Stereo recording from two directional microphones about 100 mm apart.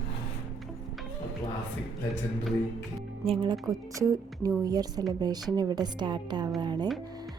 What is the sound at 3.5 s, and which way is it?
A woman's voice, 35° right (ahead or behind).